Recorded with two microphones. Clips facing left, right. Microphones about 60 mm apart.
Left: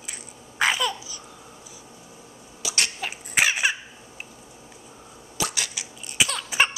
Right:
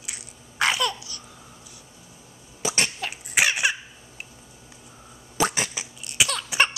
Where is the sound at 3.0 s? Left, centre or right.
Centre.